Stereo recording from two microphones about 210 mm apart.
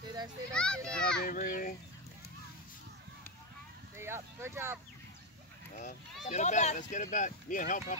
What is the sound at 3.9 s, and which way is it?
Speech, 10° right (ahead or behind).